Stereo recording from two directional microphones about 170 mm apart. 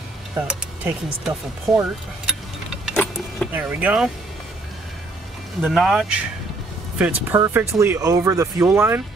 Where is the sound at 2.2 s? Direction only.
Centre (ahead or behind).